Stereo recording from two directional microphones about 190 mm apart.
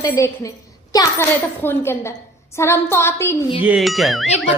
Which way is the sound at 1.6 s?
10° left (ahead or behind).